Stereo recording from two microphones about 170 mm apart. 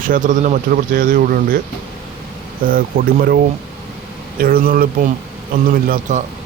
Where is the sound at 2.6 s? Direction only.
55° right (ahead or behind).